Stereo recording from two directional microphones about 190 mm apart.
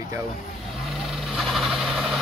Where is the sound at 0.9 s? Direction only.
Centre (ahead or behind).